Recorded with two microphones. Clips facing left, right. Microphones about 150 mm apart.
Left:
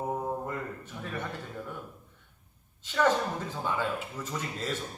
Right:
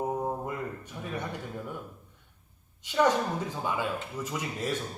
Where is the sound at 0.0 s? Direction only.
10° right (ahead or behind).